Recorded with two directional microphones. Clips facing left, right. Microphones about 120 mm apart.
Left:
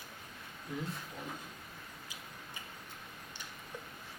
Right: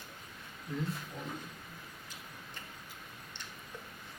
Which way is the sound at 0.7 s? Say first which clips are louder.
Right 3 dB; 15° left (ahead or behind).